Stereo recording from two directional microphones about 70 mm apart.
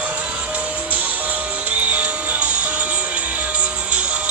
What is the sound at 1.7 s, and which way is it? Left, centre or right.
Music, right.